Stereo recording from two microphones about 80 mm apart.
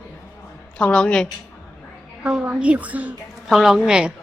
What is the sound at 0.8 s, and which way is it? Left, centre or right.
Speech, centre.